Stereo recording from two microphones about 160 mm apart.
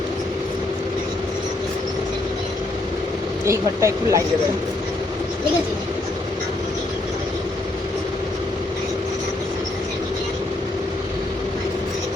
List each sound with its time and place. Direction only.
3.4 s speech: 20° right (ahead or behind)